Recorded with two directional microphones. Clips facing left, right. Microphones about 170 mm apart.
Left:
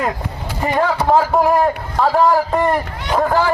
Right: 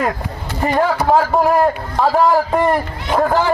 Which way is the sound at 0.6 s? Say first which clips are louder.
Right 1 dB; centre (ahead or behind).